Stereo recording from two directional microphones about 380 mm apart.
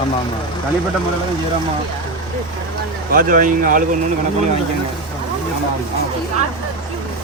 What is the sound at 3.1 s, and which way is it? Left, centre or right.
Speech, right.